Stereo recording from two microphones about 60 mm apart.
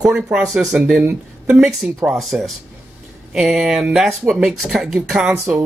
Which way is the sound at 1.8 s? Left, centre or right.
Right.